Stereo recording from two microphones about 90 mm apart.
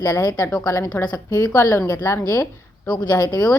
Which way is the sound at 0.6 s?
35° left (ahead or behind).